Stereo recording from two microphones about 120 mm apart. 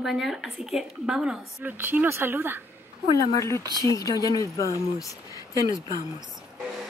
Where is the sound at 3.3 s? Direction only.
25° left (ahead or behind).